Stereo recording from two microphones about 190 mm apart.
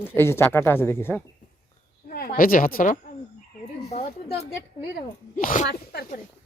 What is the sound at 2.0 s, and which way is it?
Speech, 50° left (ahead or behind).